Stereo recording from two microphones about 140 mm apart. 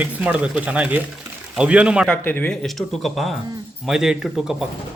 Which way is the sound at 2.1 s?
15° left (ahead or behind).